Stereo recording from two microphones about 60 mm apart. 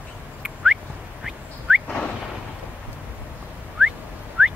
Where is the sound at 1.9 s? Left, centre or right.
Centre.